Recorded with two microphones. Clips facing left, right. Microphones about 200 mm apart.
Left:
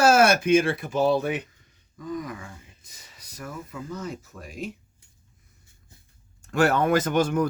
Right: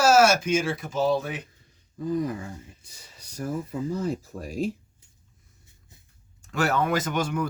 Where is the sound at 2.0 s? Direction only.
35° right (ahead or behind).